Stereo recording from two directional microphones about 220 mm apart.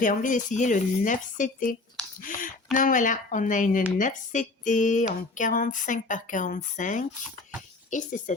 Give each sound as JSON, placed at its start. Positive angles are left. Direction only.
{"t": 0.0, "sound": "speech", "side_deg": 35}
{"t": 2.7, "sound": "speech", "side_deg": 35}